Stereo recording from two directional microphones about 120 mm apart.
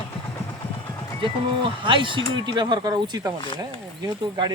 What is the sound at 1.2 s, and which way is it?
Speech, 45° right (ahead or behind).